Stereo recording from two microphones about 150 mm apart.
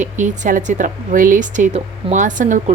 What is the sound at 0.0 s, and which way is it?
A woman's voice, 55° right (ahead or behind).